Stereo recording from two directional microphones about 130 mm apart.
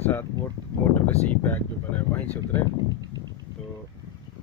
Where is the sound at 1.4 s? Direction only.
15° left (ahead or behind).